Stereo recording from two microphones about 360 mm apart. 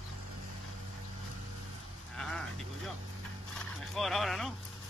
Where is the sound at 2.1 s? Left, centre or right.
Centre.